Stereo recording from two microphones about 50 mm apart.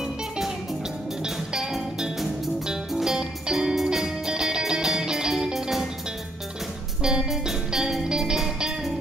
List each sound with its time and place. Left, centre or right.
1.2 s music: centre
7.0 s music: centre